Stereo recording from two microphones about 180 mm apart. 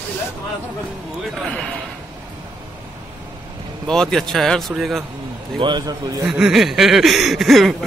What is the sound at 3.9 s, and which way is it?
Speech, centre (ahead or behind).